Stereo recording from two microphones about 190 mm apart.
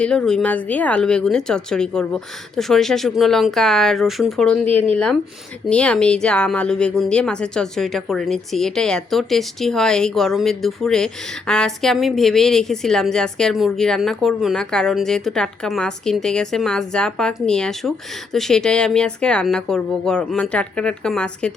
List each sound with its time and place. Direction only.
0.0 s speech: 5° left (ahead or behind)
5.6 s speech: 5° left (ahead or behind)